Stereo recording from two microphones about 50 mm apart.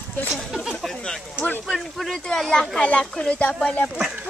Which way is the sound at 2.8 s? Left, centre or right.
Left.